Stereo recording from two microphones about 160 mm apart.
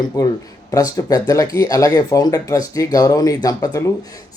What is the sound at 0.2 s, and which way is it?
Speech, 25° left (ahead or behind).